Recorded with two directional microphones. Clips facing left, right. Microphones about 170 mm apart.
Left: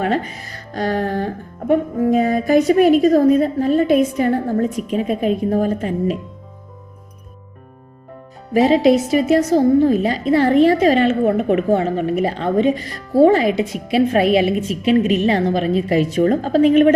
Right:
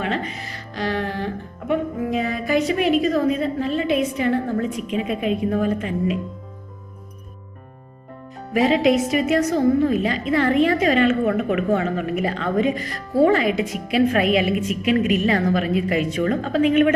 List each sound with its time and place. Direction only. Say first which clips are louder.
0.0 s a woman's voice: left 5 dB; 45° left (ahead or behind)
8.5 s a woman's voice: left 4 dB; 35° left (ahead or behind)